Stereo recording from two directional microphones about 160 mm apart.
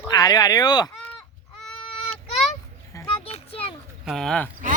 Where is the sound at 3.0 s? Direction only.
35° left (ahead or behind).